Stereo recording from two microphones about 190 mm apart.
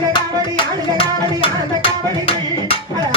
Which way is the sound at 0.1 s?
25° left (ahead or behind).